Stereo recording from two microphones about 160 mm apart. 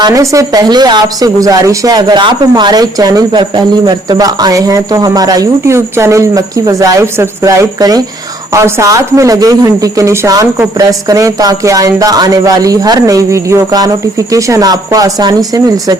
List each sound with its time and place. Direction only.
0.0 s speech: 20° right (ahead or behind)